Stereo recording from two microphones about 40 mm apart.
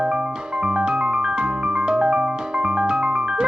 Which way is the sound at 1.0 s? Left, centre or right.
Centre.